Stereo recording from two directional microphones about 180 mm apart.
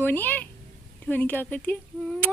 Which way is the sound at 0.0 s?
10° left (ahead or behind).